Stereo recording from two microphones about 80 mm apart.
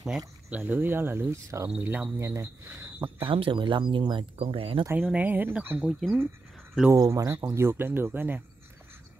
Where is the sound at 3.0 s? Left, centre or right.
Right.